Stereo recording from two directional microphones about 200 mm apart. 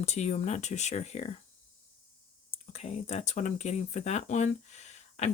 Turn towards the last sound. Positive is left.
turn(degrees=35)  # may be behind; listen again after turning